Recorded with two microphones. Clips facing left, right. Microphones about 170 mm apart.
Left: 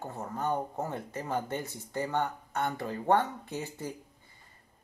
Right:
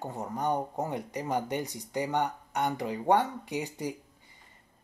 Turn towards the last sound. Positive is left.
turn(degrees=-15)  # may be behind; listen again after turning